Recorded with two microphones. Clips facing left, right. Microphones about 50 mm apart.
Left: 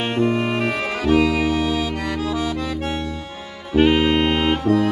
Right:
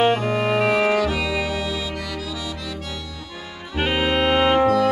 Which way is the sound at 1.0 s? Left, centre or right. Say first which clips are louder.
Left 6 dB; left.